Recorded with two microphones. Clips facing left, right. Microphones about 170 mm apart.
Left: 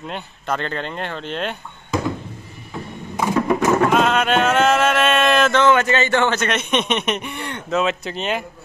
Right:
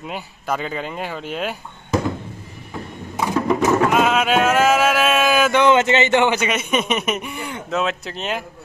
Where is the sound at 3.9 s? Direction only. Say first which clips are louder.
Even; 5° right (ahead or behind).